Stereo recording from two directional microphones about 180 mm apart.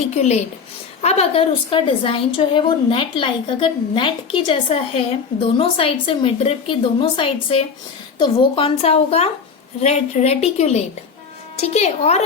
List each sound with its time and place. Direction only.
0.1 s a woman's voice: 40° left (ahead or behind)